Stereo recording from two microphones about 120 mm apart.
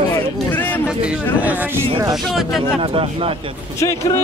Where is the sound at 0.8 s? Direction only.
10° right (ahead or behind).